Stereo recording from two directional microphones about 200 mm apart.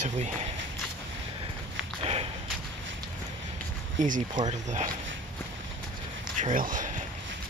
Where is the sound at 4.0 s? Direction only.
40° right (ahead or behind).